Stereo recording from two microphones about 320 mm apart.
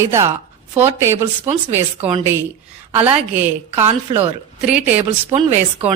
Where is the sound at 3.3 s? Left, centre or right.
Centre.